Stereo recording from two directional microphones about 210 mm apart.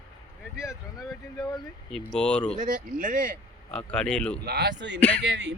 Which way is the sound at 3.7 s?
5° left (ahead or behind).